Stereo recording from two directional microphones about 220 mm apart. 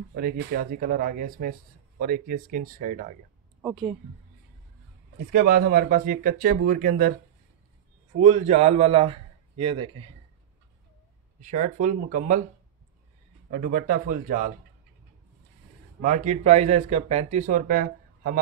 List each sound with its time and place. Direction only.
0.1 s speech: 45° right (ahead or behind)
3.6 s speech: centre (ahead or behind)
5.3 s speech: 45° right (ahead or behind)
8.2 s a man's voice: 30° right (ahead or behind)
11.4 s speech: 35° right (ahead or behind)
13.5 s speech: 40° right (ahead or behind)
16.0 s speech: 35° right (ahead or behind)